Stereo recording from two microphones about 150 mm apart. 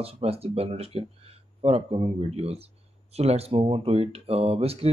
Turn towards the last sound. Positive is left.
turn(degrees=-40)  # may be behind; listen again after turning